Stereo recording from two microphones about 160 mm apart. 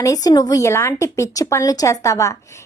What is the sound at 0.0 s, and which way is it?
A woman's voice, 20° left (ahead or behind).